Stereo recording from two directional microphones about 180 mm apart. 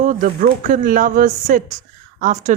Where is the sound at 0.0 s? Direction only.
45° right (ahead or behind).